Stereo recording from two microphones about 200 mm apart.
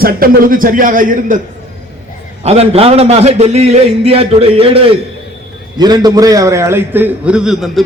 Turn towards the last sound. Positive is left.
turn(degrees=0)  # may be behind; listen again after turning